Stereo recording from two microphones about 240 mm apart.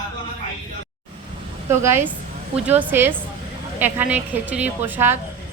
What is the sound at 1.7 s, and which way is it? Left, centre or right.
A woman's voice, centre.